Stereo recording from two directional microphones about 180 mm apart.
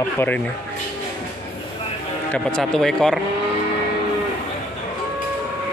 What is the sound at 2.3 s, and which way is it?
Speech, 5° left (ahead or behind).